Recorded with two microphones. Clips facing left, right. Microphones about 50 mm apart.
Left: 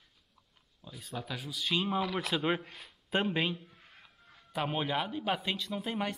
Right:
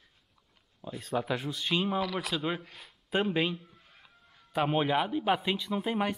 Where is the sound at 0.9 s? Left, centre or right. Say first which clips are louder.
Right 9 dB; right.